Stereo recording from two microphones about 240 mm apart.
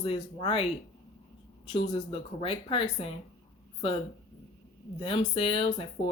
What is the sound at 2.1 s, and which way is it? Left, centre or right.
Speech, left.